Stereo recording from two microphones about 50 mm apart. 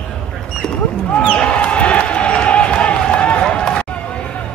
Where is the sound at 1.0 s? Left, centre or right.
Left.